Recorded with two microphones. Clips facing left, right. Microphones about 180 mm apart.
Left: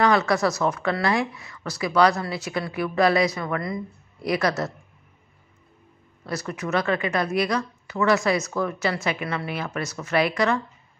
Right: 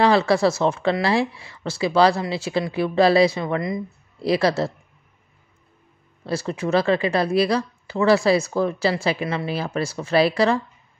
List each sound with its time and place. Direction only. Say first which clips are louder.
0.0 s speech: right 3 dB; 30° right (ahead or behind)
6.2 s a woman's voice: right 5 dB; 30° right (ahead or behind)